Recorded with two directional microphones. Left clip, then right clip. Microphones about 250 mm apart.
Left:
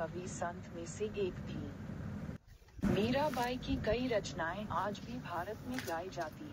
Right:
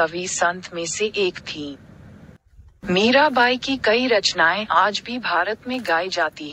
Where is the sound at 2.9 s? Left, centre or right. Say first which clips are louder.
Right 19 dB; right.